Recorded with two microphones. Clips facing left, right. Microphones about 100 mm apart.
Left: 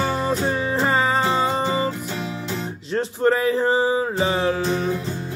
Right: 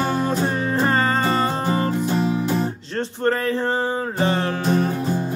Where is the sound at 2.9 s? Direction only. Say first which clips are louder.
Left 3 dB; 10° left (ahead or behind).